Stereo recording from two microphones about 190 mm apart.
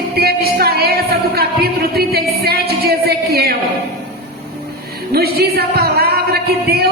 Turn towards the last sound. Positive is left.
turn(degrees=-55)  # may be behind; listen again after turning